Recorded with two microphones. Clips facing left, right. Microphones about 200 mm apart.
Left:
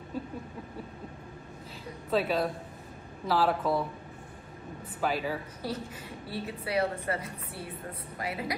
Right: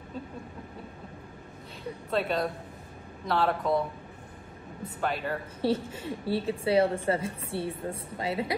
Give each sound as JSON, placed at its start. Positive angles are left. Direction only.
{"t": 2.0, "sound": "speech", "side_deg": 0}
{"t": 4.8, "sound": "speech", "side_deg": 0}
{"t": 5.6, "sound": "a woman's voice", "side_deg": -30}